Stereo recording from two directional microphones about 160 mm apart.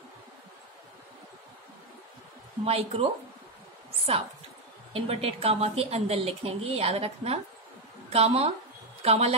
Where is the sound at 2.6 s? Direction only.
40° right (ahead or behind).